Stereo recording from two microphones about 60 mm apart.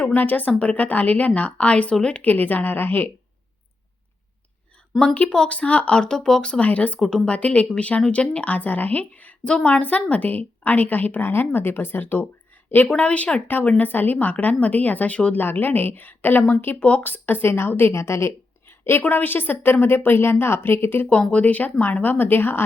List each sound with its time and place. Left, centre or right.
0.1 s a woman's voice: left
5.3 s speech: centre
5.5 s a woman's voice: left
16.8 s a woman's voice: left
17.1 s a woman's voice: left
17.9 s speech: left
19.0 s a woman's voice: left
21.1 s a woman's voice: left